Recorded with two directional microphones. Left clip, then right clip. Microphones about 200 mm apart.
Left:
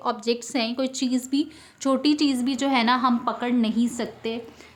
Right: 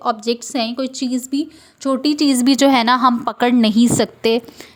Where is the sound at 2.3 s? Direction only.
40° right (ahead or behind).